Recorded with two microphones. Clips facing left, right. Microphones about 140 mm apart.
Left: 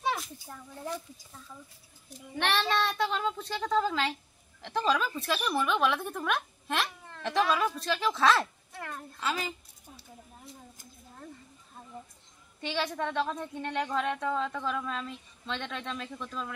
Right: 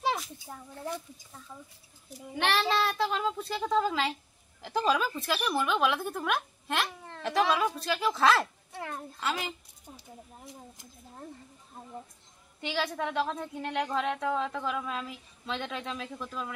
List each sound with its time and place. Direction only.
0.5 s speech: 15° right (ahead or behind)
2.3 s speech: centre (ahead or behind)
8.7 s a child's voice: 20° right (ahead or behind)
9.2 s speech: centre (ahead or behind)
12.5 s speech: centre (ahead or behind)